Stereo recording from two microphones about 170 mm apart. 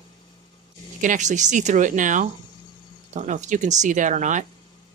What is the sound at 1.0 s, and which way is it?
Speech, 45° right (ahead or behind).